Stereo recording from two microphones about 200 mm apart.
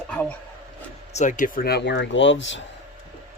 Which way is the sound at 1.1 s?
40° left (ahead or behind).